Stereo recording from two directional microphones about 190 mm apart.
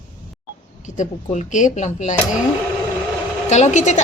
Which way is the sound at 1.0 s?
40° left (ahead or behind).